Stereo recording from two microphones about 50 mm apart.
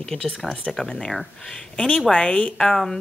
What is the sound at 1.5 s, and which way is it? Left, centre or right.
Speech, centre.